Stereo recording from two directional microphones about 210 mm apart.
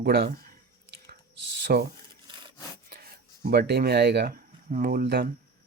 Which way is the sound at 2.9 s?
45° right (ahead or behind).